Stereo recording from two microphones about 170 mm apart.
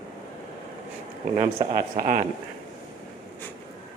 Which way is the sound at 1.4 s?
25° right (ahead or behind).